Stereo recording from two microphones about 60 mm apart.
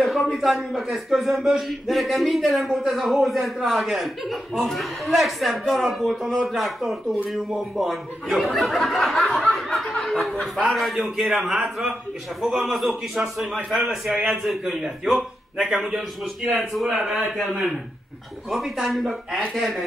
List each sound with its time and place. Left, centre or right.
0.0 s a man's voice: centre
9.5 s snicker: centre
10.7 s a man's voice: centre
14.1 s a man's voice: right
14.4 s a man's voice: centre
16.8 s a man's voice: centre